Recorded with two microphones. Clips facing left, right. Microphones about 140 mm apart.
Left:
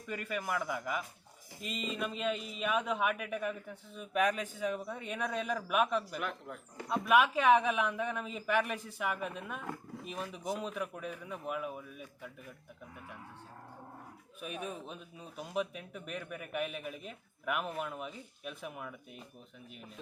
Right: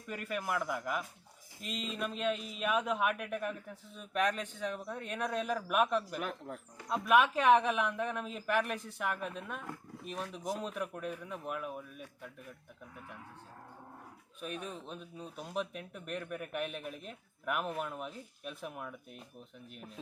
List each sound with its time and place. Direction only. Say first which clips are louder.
0.1 s speech: even; centre (ahead or behind)
6.1 s speech: even; 40° right (ahead or behind)
6.8 s speech: even; centre (ahead or behind)
14.4 s speech: left 1 dB; 5° left (ahead or behind)